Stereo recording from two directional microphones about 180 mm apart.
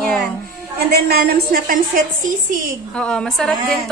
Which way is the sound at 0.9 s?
60° right (ahead or behind).